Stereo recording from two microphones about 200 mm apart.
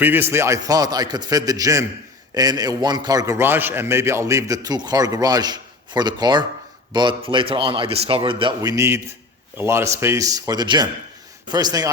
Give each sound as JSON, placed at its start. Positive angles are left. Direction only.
{"t": 0.0, "sound": "a man's voice", "side_deg": -10}